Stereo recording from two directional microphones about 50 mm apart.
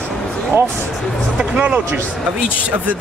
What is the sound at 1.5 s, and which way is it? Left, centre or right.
Speech, right.